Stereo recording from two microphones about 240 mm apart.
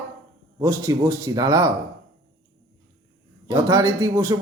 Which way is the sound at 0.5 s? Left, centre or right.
Centre.